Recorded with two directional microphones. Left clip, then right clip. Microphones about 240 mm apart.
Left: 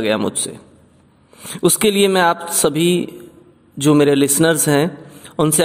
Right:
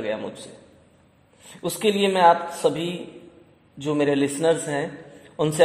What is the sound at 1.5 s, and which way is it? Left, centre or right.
A man's voice, left.